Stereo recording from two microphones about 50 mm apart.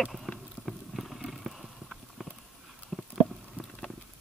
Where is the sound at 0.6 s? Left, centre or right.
Centre.